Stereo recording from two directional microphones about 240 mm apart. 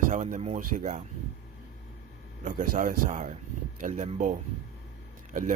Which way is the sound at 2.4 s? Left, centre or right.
Right.